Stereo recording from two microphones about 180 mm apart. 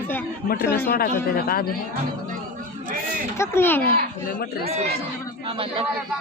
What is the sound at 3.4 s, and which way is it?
Speech, 15° left (ahead or behind).